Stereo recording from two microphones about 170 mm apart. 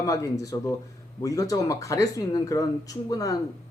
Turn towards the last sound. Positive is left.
turn(degrees=20)  # may be behind; listen again after turning